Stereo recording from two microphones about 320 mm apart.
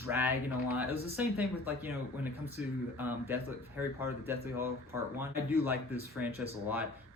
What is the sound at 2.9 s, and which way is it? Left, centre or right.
Speech, centre.